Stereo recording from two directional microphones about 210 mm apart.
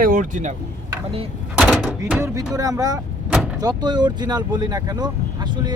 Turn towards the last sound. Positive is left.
turn(degrees=-20)  # may be behind; listen again after turning